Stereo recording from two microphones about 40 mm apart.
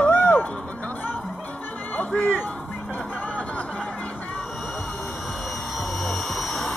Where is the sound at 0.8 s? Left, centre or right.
Left.